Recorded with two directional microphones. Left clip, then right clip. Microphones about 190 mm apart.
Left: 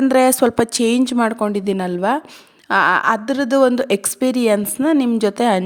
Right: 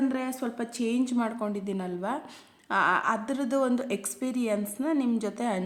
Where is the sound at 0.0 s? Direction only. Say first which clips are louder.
Left 17 dB; 60° left (ahead or behind).